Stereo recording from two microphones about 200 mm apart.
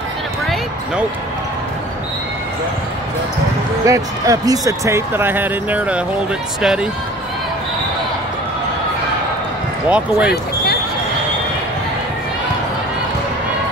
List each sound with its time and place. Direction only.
3.8 s speech: 15° right (ahead or behind)
9.8 s speech: 5° right (ahead or behind)
10.3 s basketball bounce: 50° left (ahead or behind)